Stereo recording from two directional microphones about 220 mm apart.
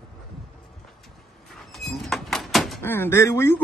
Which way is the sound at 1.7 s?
Centre (ahead or behind).